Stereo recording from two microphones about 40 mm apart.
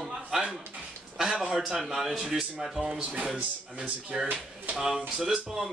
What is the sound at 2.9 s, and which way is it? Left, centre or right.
Speech, right.